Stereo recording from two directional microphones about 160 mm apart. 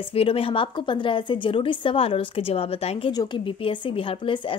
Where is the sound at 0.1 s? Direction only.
35° left (ahead or behind).